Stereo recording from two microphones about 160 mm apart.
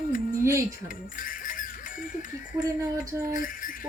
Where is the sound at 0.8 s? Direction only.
60° left (ahead or behind).